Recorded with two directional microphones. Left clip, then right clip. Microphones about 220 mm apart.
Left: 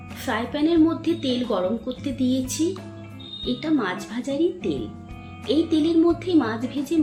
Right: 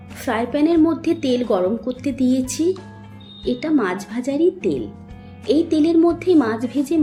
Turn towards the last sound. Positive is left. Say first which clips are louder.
# right 5 dB
turn(degrees=-20)  # may be behind; listen again after turning